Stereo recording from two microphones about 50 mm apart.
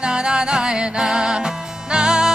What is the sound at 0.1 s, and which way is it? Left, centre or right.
Music, centre.